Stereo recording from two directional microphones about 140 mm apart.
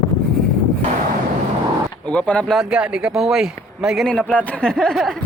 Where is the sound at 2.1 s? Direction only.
10° left (ahead or behind).